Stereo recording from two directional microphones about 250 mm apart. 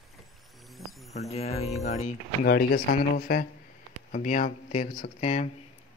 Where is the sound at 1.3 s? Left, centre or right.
Left.